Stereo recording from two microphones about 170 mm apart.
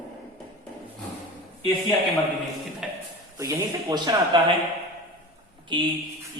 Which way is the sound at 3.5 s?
20° right (ahead or behind).